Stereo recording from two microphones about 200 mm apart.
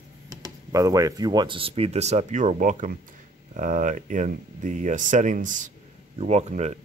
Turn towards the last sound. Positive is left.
turn(degrees=-35)  # may be behind; listen again after turning